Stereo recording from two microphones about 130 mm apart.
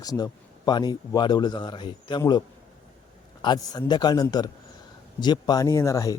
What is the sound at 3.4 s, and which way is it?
Speech, 30° left (ahead or behind).